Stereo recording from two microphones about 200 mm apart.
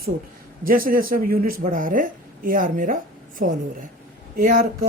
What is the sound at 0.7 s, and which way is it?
Speech, 45° right (ahead or behind).